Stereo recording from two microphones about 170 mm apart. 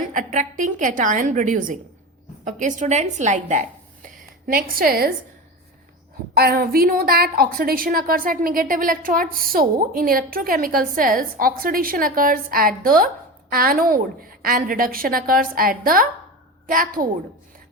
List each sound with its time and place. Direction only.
0.1 s a woman's voice: 50° right (ahead or behind)
6.3 s a woman's voice: 65° right (ahead or behind)